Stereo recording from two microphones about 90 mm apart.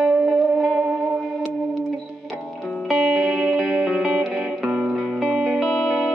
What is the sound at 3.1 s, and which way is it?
Music, 5° right (ahead or behind).